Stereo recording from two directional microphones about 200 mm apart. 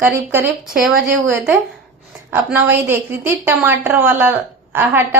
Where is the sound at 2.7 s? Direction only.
10° right (ahead or behind).